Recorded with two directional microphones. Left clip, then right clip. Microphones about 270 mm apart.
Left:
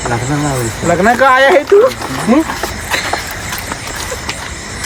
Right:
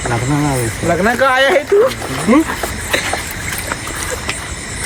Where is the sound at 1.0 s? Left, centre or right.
Left.